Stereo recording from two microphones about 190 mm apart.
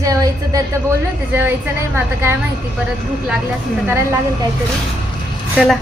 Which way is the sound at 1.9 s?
10° right (ahead or behind).